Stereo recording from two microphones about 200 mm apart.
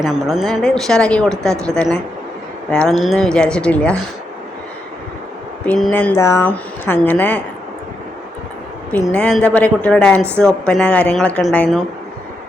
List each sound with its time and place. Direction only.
0.0 s a woman's voice: centre (ahead or behind)
5.6 s speech: 10° left (ahead or behind)
8.9 s a woman's voice: 5° left (ahead or behind)